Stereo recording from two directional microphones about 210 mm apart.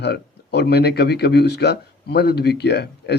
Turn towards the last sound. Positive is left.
turn(degrees=50)  # may be behind; listen again after turning